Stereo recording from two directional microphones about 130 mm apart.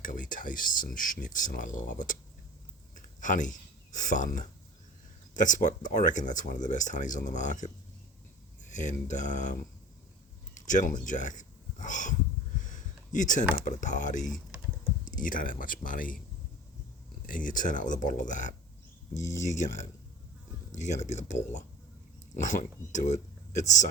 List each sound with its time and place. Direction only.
0.0 s speech: 90° left
2.9 s a sound: 80° left
3.9 s speech: 75° left (ahead or behind)
8.7 s speech: 70° left (ahead or behind)
10.5 s a sound: 75° left (ahead or behind)
11.0 s speech: 75° left (ahead or behind)
12.6 s a sound: 80° left
13.4 s speech: 10° right (ahead or behind)
13.7 s speech: 75° left (ahead or behind)
15.0 s speech: 90° left
17.2 s speech: 90° left; by 18.5 s 75° left (ahead or behind)
19.1 s speech: 25° left (ahead or behind)
20.7 s speech: 65° left (ahead or behind)